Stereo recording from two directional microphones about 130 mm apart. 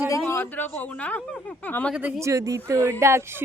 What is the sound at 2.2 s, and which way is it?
Speech, 25° right (ahead or behind).